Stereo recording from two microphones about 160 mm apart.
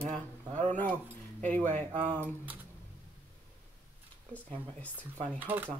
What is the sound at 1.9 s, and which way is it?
Speech, 30° right (ahead or behind).